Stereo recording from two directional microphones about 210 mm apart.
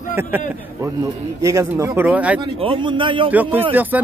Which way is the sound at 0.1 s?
10° right (ahead or behind).